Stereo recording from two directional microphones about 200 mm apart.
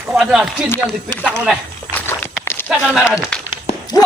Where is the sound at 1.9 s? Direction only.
10° left (ahead or behind).